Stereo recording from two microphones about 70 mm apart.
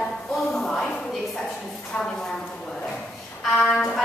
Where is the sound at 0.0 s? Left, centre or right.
Centre.